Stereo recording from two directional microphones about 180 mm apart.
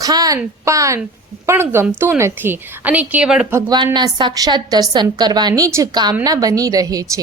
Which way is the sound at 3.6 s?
25° right (ahead or behind).